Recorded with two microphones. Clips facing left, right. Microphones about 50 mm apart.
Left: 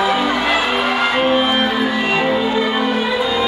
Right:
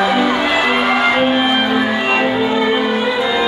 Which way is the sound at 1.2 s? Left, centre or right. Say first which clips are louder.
Right 1 dB; centre.